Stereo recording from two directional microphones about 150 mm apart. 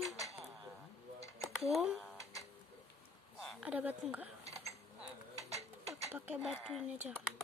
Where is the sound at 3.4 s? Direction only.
5° right (ahead or behind).